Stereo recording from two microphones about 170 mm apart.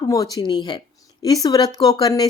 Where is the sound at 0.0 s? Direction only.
20° left (ahead or behind).